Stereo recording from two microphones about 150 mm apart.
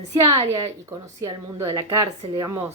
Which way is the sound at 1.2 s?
25° right (ahead or behind).